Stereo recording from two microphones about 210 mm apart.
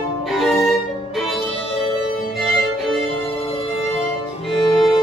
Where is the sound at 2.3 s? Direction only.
Centre (ahead or behind).